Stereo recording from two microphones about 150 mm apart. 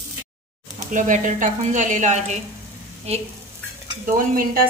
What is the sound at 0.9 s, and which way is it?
Speech, 55° right (ahead or behind).